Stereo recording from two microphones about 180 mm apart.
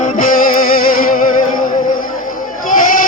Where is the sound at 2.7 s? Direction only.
50° left (ahead or behind).